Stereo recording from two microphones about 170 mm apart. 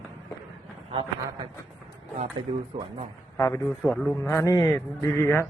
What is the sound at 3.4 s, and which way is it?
Speech, 15° left (ahead or behind).